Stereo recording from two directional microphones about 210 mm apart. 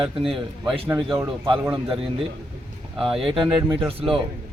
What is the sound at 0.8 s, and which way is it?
Speech, 10° right (ahead or behind).